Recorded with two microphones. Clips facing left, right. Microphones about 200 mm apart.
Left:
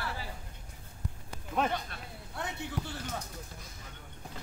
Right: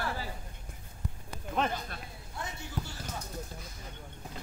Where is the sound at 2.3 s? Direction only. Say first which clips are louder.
Left 4 dB; 65° left (ahead or behind).